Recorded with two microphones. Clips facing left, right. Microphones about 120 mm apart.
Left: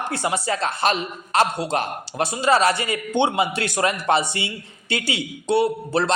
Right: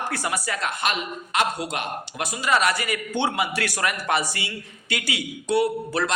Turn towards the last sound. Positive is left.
turn(degrees=25)  # may be behind; listen again after turning